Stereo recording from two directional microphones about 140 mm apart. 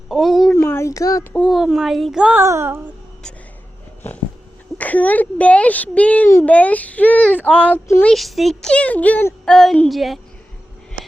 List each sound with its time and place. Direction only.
0.1 s speech: centre (ahead or behind)
0.5 s a sound: 20° left (ahead or behind)
1.3 s speech: 10° left (ahead or behind)
1.5 s speech: centre (ahead or behind)
2.4 s speech: 20° right (ahead or behind)
4.8 s speech: 10° left (ahead or behind)
8.0 s speech: centre (ahead or behind)